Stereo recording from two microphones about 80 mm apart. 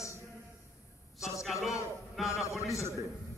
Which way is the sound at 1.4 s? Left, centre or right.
Centre.